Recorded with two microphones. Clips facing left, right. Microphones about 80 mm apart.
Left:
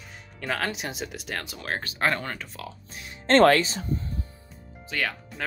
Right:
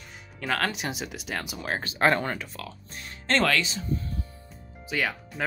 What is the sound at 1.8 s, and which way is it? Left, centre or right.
Speech, right.